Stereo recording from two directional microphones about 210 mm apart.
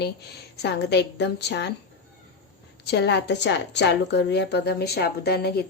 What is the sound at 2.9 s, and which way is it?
Speech, 55° left (ahead or behind).